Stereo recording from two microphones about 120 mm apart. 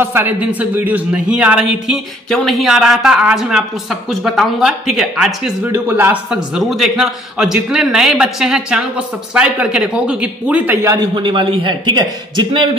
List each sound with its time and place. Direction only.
0.0 s a man's voice: 15° right (ahead or behind)
5.7 s a man's voice: 15° right (ahead or behind)
6.3 s a man's voice: 5° right (ahead or behind)
10.8 s speech: 25° right (ahead or behind)
11.1 s a man's voice: 40° right (ahead or behind)